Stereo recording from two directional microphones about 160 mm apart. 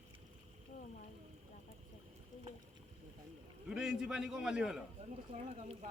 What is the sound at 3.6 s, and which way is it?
Speech, 5° right (ahead or behind).